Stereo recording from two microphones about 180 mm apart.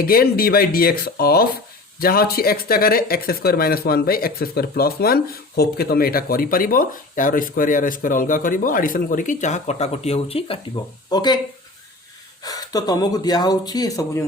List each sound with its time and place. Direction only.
0.0 s speech: 55° left (ahead or behind); by 11.3 s 25° left (ahead or behind)
12.4 s speech: 20° left (ahead or behind)